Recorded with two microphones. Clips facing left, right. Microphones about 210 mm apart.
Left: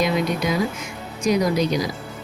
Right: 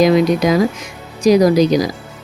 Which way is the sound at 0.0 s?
90° right.